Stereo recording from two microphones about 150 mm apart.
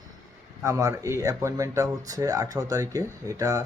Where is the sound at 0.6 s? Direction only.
20° right (ahead or behind).